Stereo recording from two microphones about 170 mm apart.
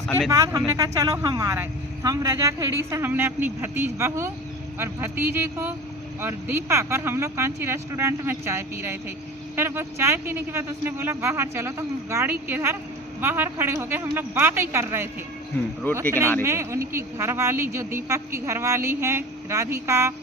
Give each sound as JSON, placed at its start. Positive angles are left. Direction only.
{"t": 0.3, "sound": "a woman's voice", "side_deg": -20}
{"t": 15.9, "sound": "speech", "side_deg": 10}
{"t": 16.4, "sound": "a woman's voice", "side_deg": -15}